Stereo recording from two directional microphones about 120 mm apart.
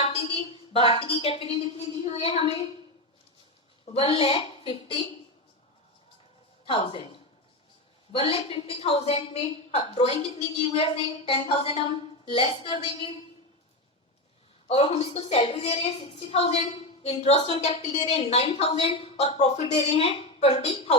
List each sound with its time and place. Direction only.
0.0 s a woman's voice: 50° left (ahead or behind)
3.9 s a woman's voice: 50° left (ahead or behind)
6.7 s a woman's voice: 50° left (ahead or behind)
14.7 s a woman's voice: 65° left (ahead or behind)